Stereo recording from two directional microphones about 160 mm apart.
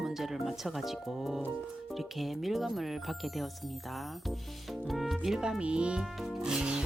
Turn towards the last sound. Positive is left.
turn(degrees=-5)  # may be behind; listen again after turning